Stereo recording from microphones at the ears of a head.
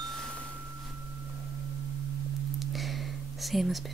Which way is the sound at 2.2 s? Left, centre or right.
Right.